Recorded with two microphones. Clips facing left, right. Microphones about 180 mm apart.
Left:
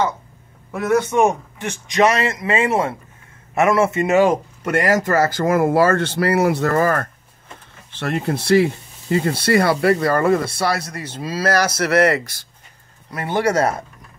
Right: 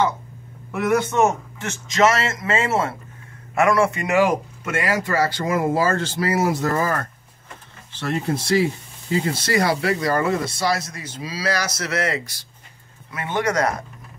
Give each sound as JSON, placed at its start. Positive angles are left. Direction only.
{"t": 0.7, "sound": "a man's voice", "side_deg": 15}
{"t": 4.6, "sound": "speech", "side_deg": 45}
{"t": 8.0, "sound": "speech", "side_deg": 60}
{"t": 13.1, "sound": "speech", "side_deg": 35}